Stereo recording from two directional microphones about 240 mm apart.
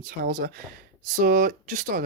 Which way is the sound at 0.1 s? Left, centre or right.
Right.